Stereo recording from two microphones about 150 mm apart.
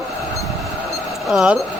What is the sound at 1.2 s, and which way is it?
Speech, 5° right (ahead or behind).